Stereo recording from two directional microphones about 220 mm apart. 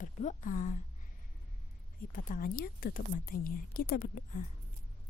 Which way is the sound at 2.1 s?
40° left (ahead or behind).